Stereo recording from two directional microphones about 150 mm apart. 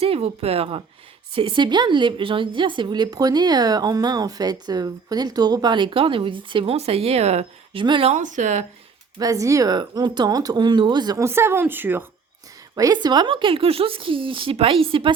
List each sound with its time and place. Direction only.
0.0 s speech: 40° right (ahead or behind)
8.1 s speech: 55° right (ahead or behind)
9.1 s speech: 25° right (ahead or behind)
12.7 s speech: 25° right (ahead or behind)